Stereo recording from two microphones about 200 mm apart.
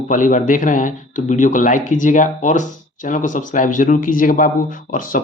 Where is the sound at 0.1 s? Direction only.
40° left (ahead or behind).